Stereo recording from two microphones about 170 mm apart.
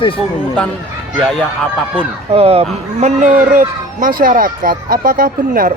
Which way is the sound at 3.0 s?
45° right (ahead or behind).